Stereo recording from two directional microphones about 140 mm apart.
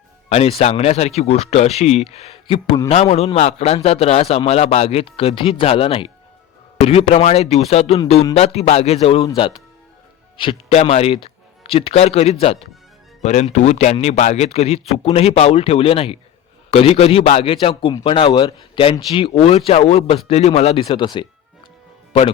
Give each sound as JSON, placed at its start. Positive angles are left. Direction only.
{"t": 0.3, "sound": "a man's voice", "side_deg": 45}
{"t": 9.2, "sound": "a man's voice", "side_deg": 35}